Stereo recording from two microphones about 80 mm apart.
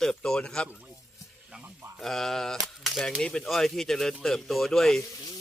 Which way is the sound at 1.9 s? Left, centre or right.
Centre.